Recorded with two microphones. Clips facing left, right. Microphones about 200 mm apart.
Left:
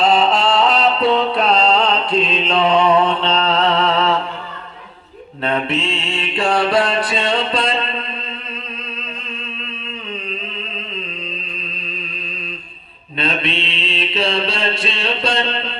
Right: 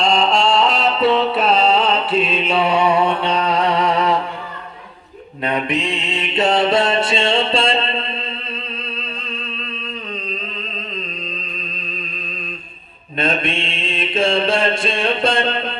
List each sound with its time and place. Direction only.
0.0 s music: 5° left (ahead or behind); by 4.2 s 15° right (ahead or behind)
5.4 s mantra: 15° right (ahead or behind)
13.1 s mantra: 50° right (ahead or behind)